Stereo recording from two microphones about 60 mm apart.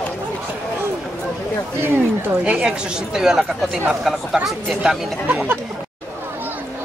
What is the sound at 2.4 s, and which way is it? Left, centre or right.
Speech, centre.